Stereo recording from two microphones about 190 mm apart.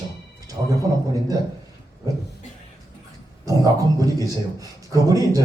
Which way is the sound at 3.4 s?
20° right (ahead or behind).